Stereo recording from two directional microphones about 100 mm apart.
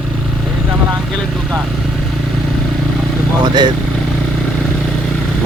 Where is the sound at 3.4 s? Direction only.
45° right (ahead or behind).